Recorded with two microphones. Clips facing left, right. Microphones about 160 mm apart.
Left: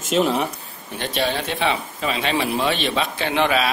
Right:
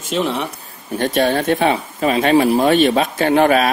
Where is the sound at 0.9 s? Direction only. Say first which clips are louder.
Right 7 dB; 45° right (ahead or behind).